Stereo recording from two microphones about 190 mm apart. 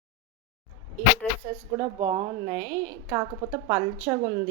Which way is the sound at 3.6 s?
25° right (ahead or behind).